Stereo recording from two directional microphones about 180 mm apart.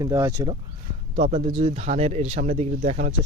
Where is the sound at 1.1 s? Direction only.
40° right (ahead or behind).